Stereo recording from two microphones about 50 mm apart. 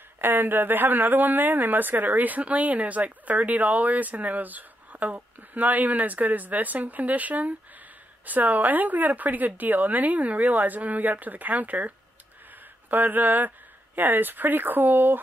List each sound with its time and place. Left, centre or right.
0.2 s speech: right
12.9 s speech: right